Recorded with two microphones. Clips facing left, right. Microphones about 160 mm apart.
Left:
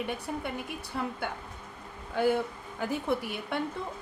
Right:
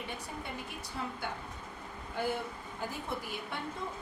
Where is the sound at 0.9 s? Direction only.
65° left (ahead or behind).